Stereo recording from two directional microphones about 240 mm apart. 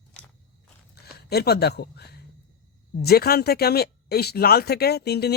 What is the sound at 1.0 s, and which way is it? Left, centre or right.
Speech, left.